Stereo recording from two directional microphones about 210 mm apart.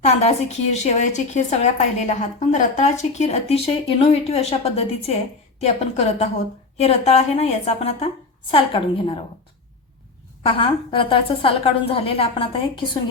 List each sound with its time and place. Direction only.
0.0 s a woman's voice: 30° left (ahead or behind)
10.6 s a woman's voice: 25° left (ahead or behind)